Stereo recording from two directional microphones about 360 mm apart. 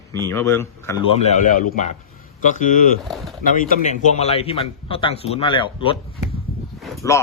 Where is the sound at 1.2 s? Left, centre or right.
Left.